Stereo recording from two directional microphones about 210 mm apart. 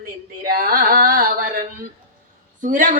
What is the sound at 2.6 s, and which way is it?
Speech, 35° right (ahead or behind).